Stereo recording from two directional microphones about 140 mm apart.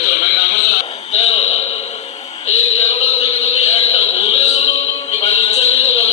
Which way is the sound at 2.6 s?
50° left (ahead or behind).